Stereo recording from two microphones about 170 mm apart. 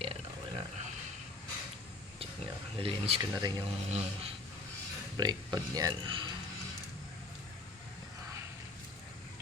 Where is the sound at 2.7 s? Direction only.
30° right (ahead or behind).